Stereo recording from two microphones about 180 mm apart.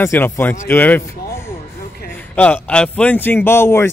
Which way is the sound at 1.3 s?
15° left (ahead or behind).